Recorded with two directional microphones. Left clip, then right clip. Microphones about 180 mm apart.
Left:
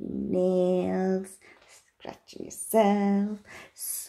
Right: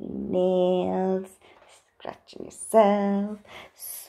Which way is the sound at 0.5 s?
10° left (ahead or behind).